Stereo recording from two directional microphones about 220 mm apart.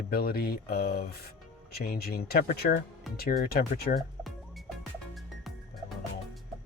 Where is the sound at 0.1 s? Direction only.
45° left (ahead or behind).